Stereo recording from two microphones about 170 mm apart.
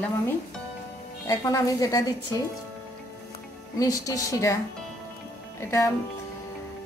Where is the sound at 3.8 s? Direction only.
20° left (ahead or behind).